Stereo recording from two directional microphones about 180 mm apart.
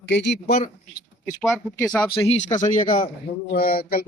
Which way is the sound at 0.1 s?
80° left.